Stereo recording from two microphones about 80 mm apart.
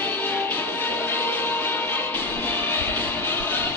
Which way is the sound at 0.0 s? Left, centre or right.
Left.